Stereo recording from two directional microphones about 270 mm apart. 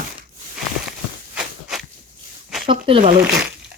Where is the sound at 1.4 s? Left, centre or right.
Centre.